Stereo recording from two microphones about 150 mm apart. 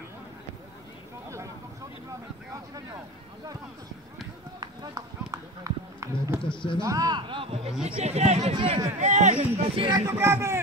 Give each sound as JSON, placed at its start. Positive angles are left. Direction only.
{"t": 4.6, "sound": "run", "side_deg": -25}
{"t": 6.4, "sound": "speech", "side_deg": 35}
{"t": 6.8, "sound": "speech", "side_deg": -25}
{"t": 8.5, "sound": "speech", "side_deg": -30}
{"t": 9.0, "sound": "speech", "side_deg": -50}
{"t": 9.8, "sound": "speech", "side_deg": -25}